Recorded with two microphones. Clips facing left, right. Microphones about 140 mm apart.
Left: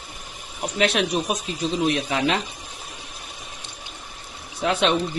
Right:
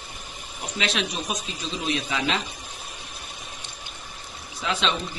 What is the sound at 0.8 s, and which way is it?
Speech, 55° left (ahead or behind).